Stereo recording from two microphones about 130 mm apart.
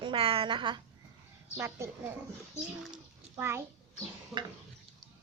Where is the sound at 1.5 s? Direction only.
20° right (ahead or behind).